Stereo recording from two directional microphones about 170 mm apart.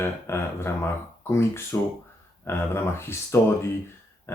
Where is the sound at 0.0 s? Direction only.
15° left (ahead or behind).